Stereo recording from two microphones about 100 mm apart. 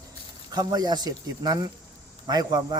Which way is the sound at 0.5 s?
40° right (ahead or behind).